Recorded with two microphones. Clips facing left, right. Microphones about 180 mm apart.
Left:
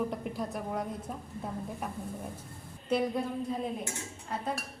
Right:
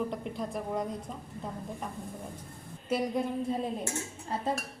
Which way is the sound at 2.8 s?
10° right (ahead or behind).